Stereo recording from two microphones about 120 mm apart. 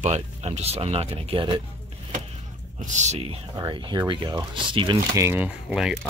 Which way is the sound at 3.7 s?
40° right (ahead or behind).